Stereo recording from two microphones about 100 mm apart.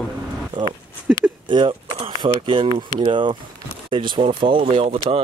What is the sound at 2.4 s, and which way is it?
Speech, 60° right (ahead or behind).